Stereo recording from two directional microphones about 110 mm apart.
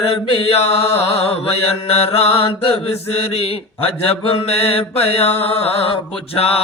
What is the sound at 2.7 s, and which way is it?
Mantra, 60° left (ahead or behind).